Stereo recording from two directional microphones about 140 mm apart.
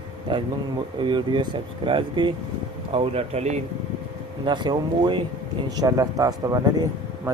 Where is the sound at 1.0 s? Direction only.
35° right (ahead or behind); by 3.6 s 50° right (ahead or behind).